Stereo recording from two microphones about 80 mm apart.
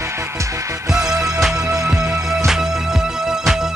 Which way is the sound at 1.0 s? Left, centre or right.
Right.